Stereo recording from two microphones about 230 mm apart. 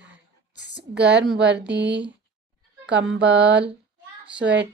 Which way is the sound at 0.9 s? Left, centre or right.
Right.